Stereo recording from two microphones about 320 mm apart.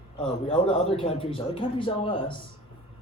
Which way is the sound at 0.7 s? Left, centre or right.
Centre.